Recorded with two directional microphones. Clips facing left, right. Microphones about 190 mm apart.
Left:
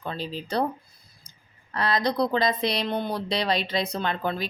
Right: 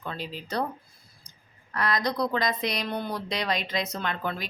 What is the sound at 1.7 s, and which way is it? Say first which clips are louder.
Speech: left 3 dB; 30° left (ahead or behind).